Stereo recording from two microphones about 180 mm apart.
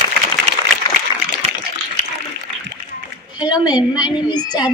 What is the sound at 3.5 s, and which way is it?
Speech, 25° left (ahead or behind).